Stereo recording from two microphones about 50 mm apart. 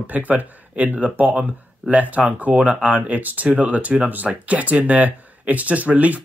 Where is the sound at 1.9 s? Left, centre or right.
Right.